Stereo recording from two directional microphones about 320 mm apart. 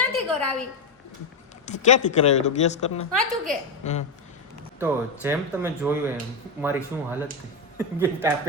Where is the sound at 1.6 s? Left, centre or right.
Left.